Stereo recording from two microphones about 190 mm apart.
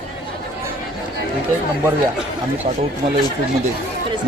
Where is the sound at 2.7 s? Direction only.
30° right (ahead or behind).